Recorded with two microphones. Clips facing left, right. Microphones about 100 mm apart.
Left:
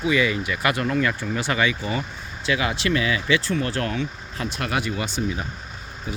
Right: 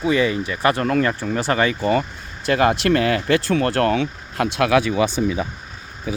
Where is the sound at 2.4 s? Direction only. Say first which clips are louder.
Right 7 dB; 50° right (ahead or behind); by 4.9 s 90° right.